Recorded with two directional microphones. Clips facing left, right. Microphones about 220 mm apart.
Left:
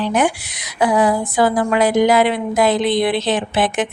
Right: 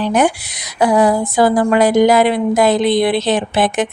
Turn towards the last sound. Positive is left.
turn(degrees=-40)  # may be behind; listen again after turning